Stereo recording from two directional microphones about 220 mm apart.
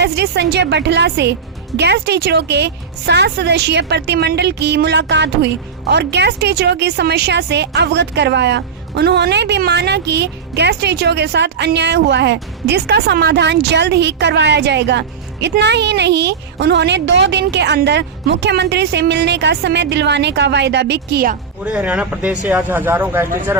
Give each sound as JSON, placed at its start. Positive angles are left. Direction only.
{"t": 0.0, "sound": "speech", "side_deg": -50}
{"t": 21.6, "sound": "speech", "side_deg": -5}